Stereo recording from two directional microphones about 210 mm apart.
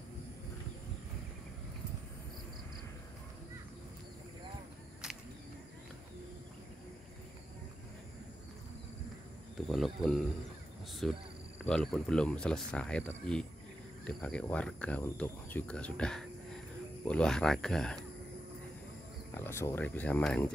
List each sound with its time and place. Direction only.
5.0 s a sound: 5° right (ahead or behind)
9.7 s speech: centre (ahead or behind)
19.3 s speech: 10° left (ahead or behind)